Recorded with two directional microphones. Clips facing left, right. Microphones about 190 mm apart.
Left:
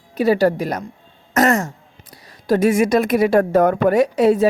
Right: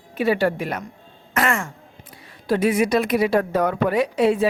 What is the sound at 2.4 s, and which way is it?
A woman's voice, 45° left (ahead or behind).